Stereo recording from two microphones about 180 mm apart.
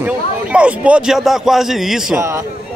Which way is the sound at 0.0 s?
5° right (ahead or behind).